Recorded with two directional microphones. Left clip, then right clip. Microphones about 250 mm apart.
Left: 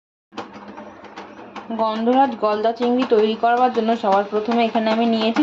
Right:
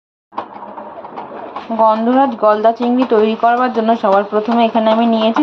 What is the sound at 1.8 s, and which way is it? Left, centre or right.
Speech, centre.